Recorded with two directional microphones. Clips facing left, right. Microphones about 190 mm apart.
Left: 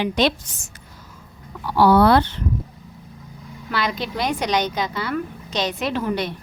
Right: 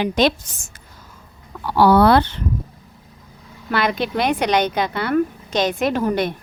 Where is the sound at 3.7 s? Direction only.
55° right (ahead or behind).